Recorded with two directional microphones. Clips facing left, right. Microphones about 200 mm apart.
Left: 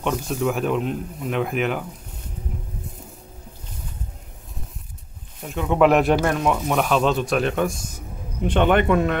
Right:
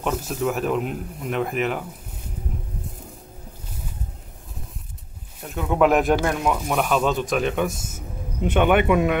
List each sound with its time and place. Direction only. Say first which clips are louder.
0.0 s speech: left 1 dB; 5° right (ahead or behind)
5.4 s speech: left 2 dB; centre (ahead or behind)
7.7 s a sound: right 1 dB; 25° right (ahead or behind)
8.5 s a man's voice: even; 10° right (ahead or behind)